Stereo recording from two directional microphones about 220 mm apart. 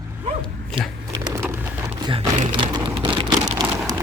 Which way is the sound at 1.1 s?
15° right (ahead or behind).